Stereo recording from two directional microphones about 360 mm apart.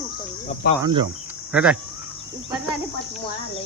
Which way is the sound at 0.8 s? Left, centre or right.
Centre.